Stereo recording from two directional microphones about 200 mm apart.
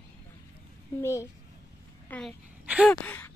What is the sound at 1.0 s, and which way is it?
Speech, 15° left (ahead or behind).